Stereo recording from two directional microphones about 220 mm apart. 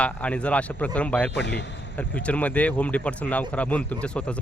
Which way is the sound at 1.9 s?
5° left (ahead or behind).